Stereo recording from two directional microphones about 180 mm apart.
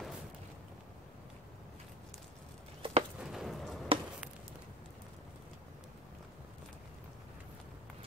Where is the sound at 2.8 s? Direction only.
30° right (ahead or behind).